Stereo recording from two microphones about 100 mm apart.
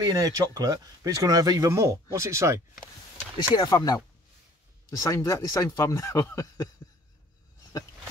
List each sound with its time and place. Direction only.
0.0 s speech: 40° right (ahead or behind)
1.7 s speech: 30° right (ahead or behind)
3.3 s speech: 40° left (ahead or behind)
5.0 s speech: 30° left (ahead or behind)